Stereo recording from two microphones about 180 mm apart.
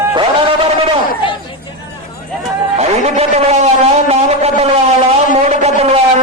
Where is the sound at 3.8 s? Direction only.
35° right (ahead or behind).